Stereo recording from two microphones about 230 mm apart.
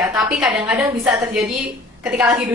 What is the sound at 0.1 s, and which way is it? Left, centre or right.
A woman's voice, centre.